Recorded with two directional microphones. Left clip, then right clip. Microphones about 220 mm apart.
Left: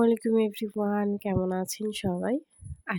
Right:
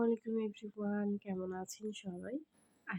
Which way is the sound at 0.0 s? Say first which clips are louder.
Left 12 dB; 45° left (ahead or behind).